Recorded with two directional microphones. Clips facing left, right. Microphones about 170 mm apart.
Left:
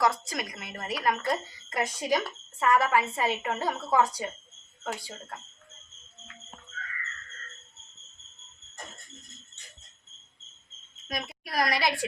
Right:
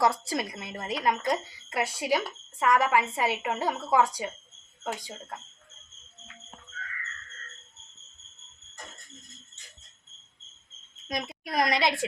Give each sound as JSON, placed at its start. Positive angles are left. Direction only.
{"t": 0.0, "sound": "a woman's voice", "side_deg": -30}
{"t": 11.1, "sound": "a woman's voice", "side_deg": -20}